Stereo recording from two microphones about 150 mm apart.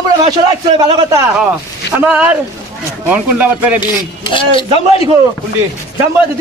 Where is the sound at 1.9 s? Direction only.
10° right (ahead or behind).